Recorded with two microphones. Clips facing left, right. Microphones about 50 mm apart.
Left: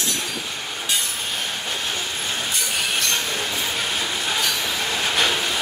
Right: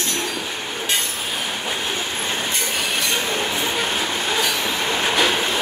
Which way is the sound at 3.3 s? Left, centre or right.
Right.